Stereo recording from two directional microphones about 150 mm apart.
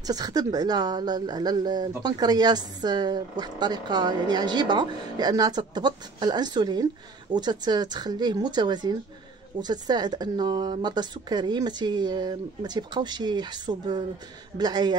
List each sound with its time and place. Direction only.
0.0 s speech: 25° right (ahead or behind)